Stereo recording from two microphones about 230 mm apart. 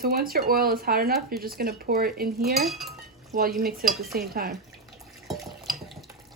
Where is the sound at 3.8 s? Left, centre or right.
Right.